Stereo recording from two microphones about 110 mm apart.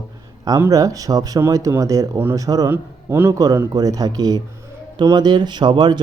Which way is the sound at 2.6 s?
20° right (ahead or behind).